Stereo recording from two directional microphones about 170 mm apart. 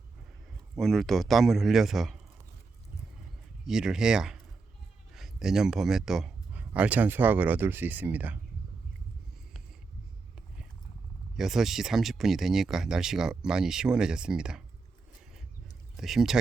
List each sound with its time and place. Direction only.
0.8 s speech: centre (ahead or behind)
3.7 s speech: 5° right (ahead or behind)
11.3 s speech: centre (ahead or behind)
16.0 s speech: centre (ahead or behind)